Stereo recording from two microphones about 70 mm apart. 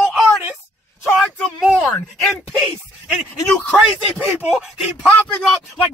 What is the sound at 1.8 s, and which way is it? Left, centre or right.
Speech, centre.